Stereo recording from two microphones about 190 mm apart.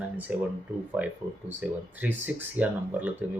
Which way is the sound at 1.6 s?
10° right (ahead or behind).